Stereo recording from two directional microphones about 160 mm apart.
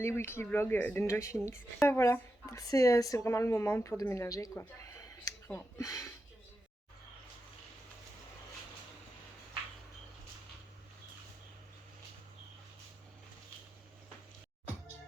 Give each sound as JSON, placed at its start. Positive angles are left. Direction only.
{"t": 0.0, "sound": "speech", "side_deg": 15}